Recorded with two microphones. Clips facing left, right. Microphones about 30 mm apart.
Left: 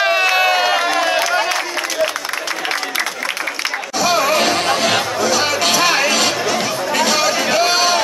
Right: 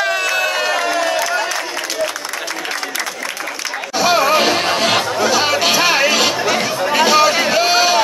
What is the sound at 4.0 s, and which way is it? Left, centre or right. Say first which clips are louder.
Music: right 2 dB; centre.